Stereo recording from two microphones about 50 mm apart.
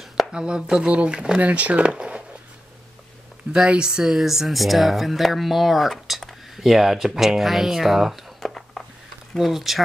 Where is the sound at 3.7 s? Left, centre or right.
Centre.